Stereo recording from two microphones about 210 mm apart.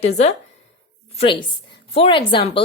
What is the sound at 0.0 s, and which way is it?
Speech, 30° left (ahead or behind).